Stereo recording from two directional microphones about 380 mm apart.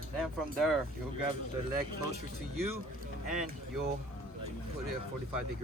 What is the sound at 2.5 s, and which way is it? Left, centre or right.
Speech, right.